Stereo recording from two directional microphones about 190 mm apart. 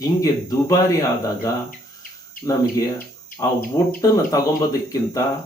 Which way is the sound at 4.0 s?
15° left (ahead or behind).